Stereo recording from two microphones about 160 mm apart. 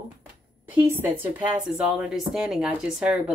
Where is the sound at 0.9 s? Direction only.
15° right (ahead or behind).